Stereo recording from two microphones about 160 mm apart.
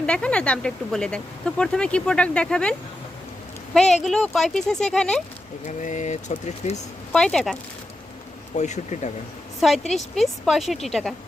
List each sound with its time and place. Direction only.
0.0 s speech: 5° left (ahead or behind)
3.8 s speech: 5° left (ahead or behind)
5.6 s speech: 50° left (ahead or behind)
7.1 s speech: 5° left (ahead or behind)
8.5 s speech: 45° left (ahead or behind)
9.6 s a woman's voice: centre (ahead or behind)